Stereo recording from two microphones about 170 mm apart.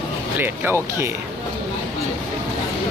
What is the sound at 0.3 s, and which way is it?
Speech, 10° right (ahead or behind).